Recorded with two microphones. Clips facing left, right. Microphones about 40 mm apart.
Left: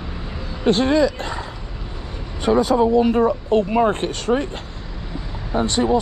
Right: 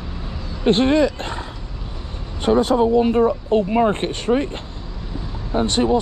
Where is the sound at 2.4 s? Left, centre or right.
Right.